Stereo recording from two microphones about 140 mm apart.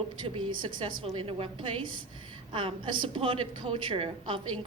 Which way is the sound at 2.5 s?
35° right (ahead or behind).